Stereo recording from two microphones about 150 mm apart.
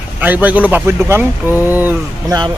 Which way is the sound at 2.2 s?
25° right (ahead or behind).